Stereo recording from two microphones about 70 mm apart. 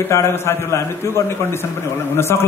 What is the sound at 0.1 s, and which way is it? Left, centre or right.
A man's voice, left.